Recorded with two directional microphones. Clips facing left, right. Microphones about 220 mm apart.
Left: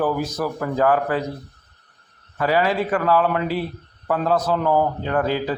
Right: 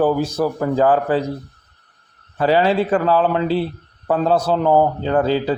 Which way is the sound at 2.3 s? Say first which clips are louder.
Right 4 dB; 30° right (ahead or behind).